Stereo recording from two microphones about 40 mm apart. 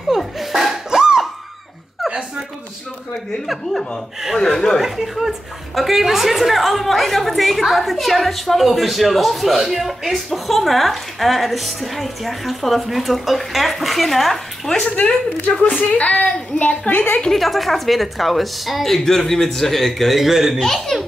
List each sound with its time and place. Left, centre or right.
0.2 s dog: centre
0.8 s a sound: centre
4.4 s speech: centre
4.7 s a woman's voice: centre
14.8 s speech: left
17.3 s a woman's voice: centre
20.2 s speech: centre
20.5 s speech: centre